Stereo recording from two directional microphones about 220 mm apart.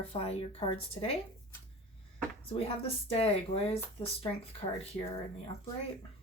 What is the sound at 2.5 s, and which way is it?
Speech, 25° left (ahead or behind).